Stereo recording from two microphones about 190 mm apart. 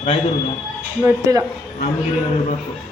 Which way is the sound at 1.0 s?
20° right (ahead or behind).